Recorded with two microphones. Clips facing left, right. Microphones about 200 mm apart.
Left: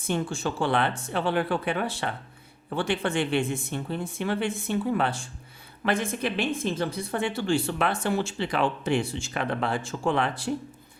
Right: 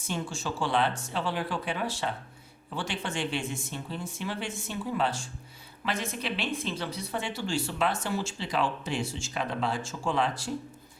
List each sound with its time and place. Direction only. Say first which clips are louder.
0.0 s speech: left 6 dB; 55° left (ahead or behind)